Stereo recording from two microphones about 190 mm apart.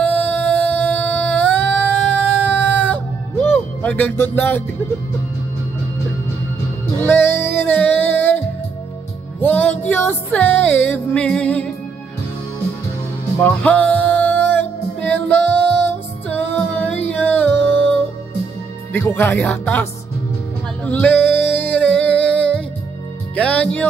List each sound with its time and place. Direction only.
0.0 s a sound: 10° left (ahead or behind)
7.0 s music: 10° left (ahead or behind)
9.4 s music: 10° left (ahead or behind)
13.4 s music: 10° left (ahead or behind)
18.9 s music: 10° left (ahead or behind)
20.8 s singing: 5° left (ahead or behind)
23.3 s music: 5° left (ahead or behind)